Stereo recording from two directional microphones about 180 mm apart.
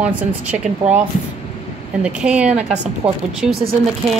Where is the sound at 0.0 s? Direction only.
5° right (ahead or behind).